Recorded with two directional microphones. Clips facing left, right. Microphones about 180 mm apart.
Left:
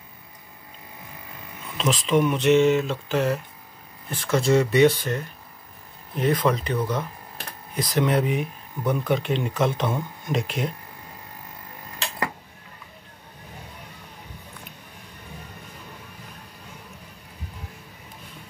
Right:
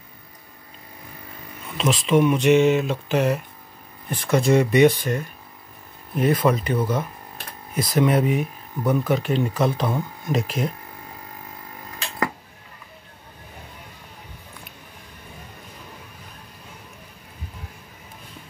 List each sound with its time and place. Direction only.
1.8 s speech: 10° right (ahead or behind)
6.1 s speech: 10° right (ahead or behind)
10.4 s speech: 40° right (ahead or behind)